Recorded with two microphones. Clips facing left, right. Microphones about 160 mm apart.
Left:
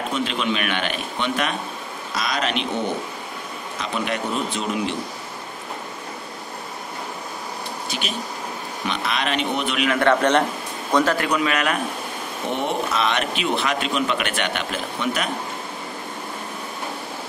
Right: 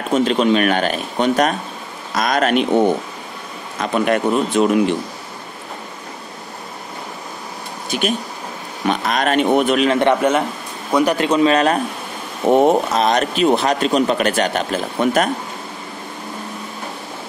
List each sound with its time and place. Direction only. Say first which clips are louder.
0.1 s a man's voice: right 12 dB; 40° right (ahead or behind)
3.8 s speech: right 9 dB; 50° right (ahead or behind)
7.9 s speech: right 11 dB; 50° right (ahead or behind)
9.8 s a man's voice: right 4 dB; 20° right (ahead or behind)
10.9 s a man's voice: right 3 dB; 10° right (ahead or behind)
11.1 s a man's voice: right 7 dB; 25° right (ahead or behind)
12.4 s a man's voice: right 11 dB; 45° right (ahead or behind)